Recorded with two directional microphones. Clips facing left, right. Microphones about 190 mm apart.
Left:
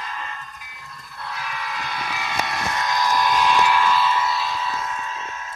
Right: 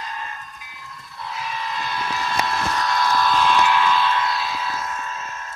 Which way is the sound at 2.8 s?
15° left (ahead or behind).